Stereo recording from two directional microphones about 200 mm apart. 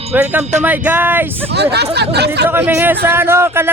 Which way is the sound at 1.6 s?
55° right (ahead or behind).